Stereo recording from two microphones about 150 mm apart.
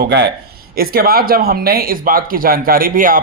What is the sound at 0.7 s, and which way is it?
Speech, 90° right.